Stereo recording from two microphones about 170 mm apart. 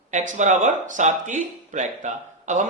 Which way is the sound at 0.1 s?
45° right (ahead or behind).